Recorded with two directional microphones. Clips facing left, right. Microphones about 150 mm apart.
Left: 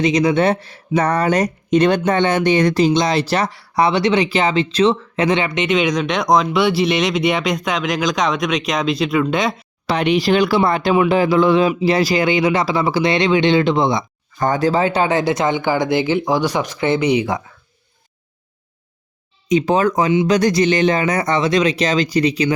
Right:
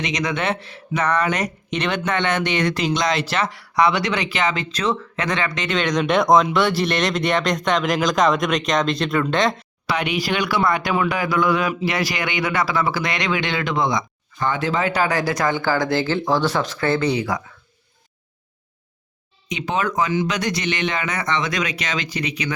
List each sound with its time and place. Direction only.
0.0 s speech: 30° left (ahead or behind)
5.6 s speech: 10° left (ahead or behind)
9.9 s speech: 35° left (ahead or behind)
14.3 s speech: 40° left (ahead or behind); by 17.4 s 20° left (ahead or behind)
19.5 s speech: 40° left (ahead or behind)